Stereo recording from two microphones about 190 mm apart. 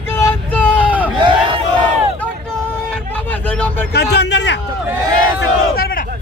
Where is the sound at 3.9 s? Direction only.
60° left (ahead or behind).